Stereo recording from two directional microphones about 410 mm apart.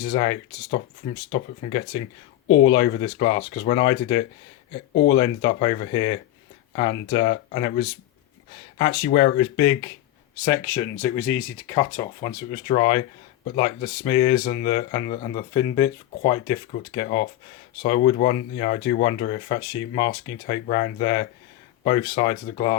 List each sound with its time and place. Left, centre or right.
0.0 s speech: centre